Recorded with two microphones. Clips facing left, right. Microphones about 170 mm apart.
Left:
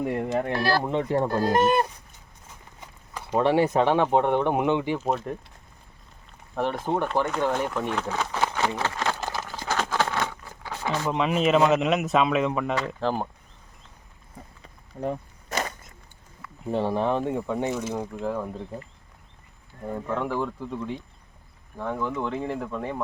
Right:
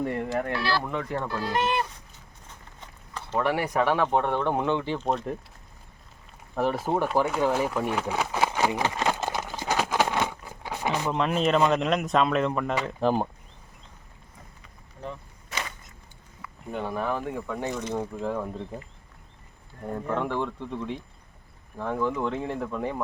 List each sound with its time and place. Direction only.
0.0 s speech: 15° left (ahead or behind)
0.5 s speech: 45° left (ahead or behind)
0.8 s speech: 25° left (ahead or behind)
1.3 s speech: 45° left (ahead or behind)
3.3 s speech: 25° left (ahead or behind)
4.9 s speech: 5° left (ahead or behind)
6.6 s a sound: 5° right (ahead or behind)
11.1 s speech: 5° left (ahead or behind)
12.7 s speech: 10° right (ahead or behind)
15.0 s a sound: 45° left (ahead or behind)
16.7 s speech: 30° left (ahead or behind)
17.7 s speech: 5° left (ahead or behind)
19.9 s speech: centre (ahead or behind)